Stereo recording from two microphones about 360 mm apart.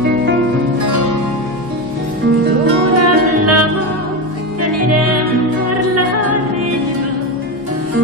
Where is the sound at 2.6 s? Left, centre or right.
Right.